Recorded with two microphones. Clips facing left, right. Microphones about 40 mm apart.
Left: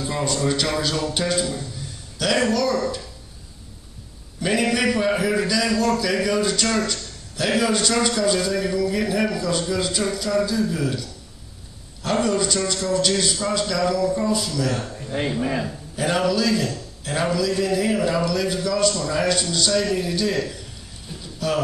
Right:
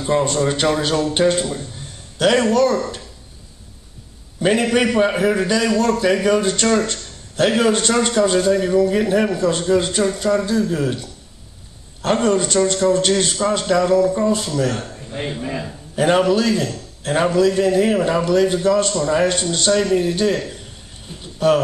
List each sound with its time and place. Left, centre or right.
0.0 s speech: right
4.4 s a man's voice: right
16.0 s a man's voice: right
21.2 s a sound: right